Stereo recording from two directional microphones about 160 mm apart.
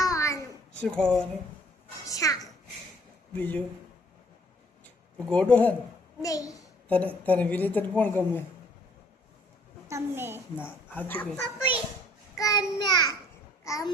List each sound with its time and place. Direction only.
0.0 s a sound: 20° left (ahead or behind)
0.8 s speech: 5° left (ahead or behind)
2.0 s a child's voice: 20° left (ahead or behind)
3.3 s a woman's voice: 10° left (ahead or behind)
5.3 s a woman's voice: 5° left (ahead or behind)
6.2 s a child's voice: 20° left (ahead or behind)
6.8 s a woman's voice: 10° left (ahead or behind)
9.9 s a woman's voice: 15° right (ahead or behind)
10.6 s a woman's voice: 10° left (ahead or behind)
12.4 s a child's voice: 20° left (ahead or behind)